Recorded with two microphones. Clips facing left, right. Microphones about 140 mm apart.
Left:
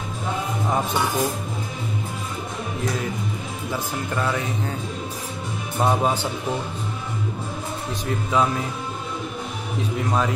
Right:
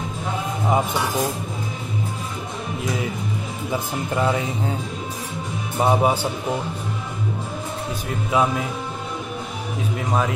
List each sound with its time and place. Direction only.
4.1 s speech: 20° right (ahead or behind)
5.8 s speech: 10° right (ahead or behind)
8.1 s speech: 5° right (ahead or behind)
9.9 s speech: centre (ahead or behind)